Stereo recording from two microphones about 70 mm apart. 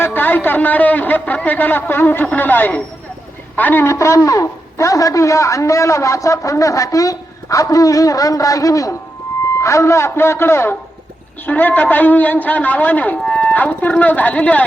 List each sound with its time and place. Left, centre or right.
0.0 s a man's voice: left
3.8 s a man's voice: left
11.4 s a man's voice: left